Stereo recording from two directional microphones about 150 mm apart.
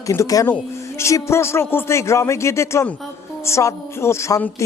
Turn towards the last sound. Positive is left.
turn(degrees=20)  # may be behind; listen again after turning